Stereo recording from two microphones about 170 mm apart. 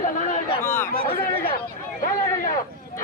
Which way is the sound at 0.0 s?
50° left (ahead or behind).